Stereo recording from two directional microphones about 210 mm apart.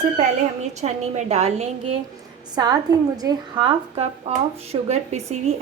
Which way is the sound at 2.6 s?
20° right (ahead or behind).